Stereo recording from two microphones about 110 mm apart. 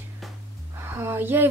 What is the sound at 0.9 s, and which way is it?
Speech, 20° right (ahead or behind).